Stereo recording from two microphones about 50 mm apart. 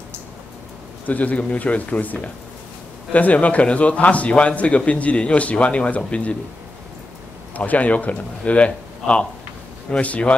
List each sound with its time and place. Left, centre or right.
1.0 s a man's voice: left
7.5 s a man's voice: left